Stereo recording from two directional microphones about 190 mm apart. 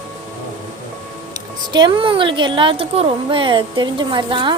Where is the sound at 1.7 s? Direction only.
25° right (ahead or behind).